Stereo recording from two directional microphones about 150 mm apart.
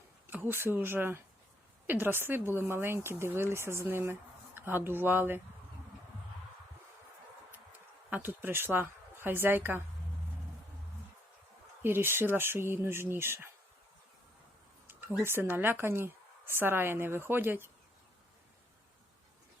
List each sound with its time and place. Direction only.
0.3 s speech: 15° right (ahead or behind)
8.1 s a woman's voice: 15° right (ahead or behind)
11.8 s speech: 15° right (ahead or behind)
15.2 s speech: 15° right (ahead or behind)